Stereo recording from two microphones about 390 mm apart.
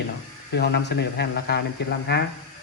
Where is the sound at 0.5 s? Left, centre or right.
Left.